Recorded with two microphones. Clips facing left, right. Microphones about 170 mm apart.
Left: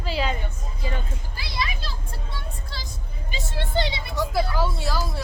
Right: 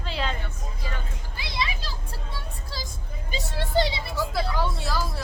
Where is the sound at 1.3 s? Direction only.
20° right (ahead or behind).